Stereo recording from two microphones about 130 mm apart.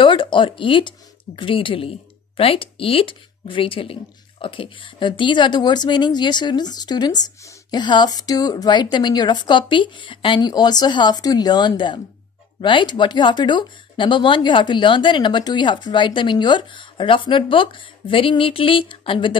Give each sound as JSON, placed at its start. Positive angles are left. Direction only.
{"t": 0.0, "sound": "speech", "side_deg": 40}